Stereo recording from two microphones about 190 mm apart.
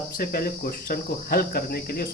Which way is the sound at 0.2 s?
50° left (ahead or behind).